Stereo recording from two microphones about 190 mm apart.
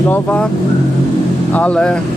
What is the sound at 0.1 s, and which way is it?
Speech, 5° left (ahead or behind).